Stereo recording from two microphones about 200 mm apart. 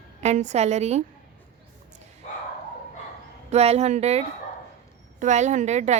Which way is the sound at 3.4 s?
30° right (ahead or behind).